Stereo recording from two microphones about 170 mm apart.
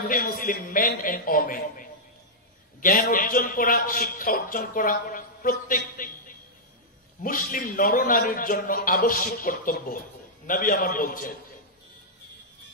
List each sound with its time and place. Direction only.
0.1 s speech: 55° left (ahead or behind)